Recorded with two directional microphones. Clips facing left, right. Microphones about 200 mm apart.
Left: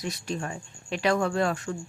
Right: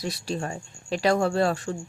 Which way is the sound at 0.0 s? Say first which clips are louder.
Right 2 dB; 35° right (ahead or behind).